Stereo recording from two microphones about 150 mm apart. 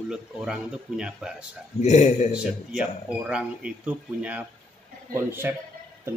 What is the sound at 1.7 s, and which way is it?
Speech, 50° left (ahead or behind).